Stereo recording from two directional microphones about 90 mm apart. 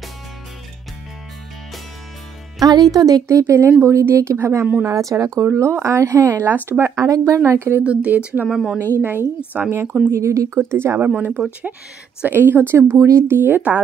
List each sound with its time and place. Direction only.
2.6 s speech: 45° right (ahead or behind)
6.4 s speech: 25° right (ahead or behind)
7.8 s speech: 15° right (ahead or behind)
9.5 s speech: 25° right (ahead or behind)
10.2 s speech: 35° right (ahead or behind)
11.1 s speech: 15° right (ahead or behind)